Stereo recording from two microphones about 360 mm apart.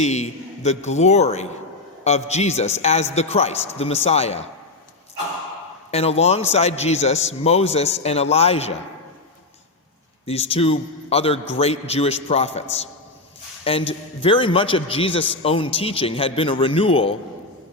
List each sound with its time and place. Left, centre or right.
0.0 s a man's voice: centre
5.9 s a man's voice: centre
10.2 s a man's voice: centre